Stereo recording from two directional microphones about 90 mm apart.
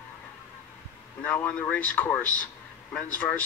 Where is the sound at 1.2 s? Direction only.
15° left (ahead or behind).